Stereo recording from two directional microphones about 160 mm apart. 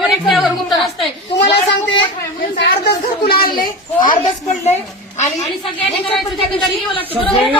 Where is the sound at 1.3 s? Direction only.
90° left; by 4.1 s 60° left (ahead or behind).